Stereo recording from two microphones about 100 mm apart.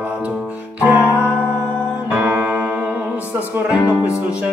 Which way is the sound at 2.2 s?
15° right (ahead or behind).